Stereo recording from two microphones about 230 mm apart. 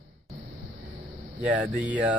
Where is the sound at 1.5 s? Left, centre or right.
Centre.